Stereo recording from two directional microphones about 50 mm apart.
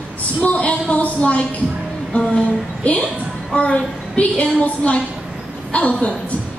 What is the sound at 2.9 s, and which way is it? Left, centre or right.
A woman's voice, left.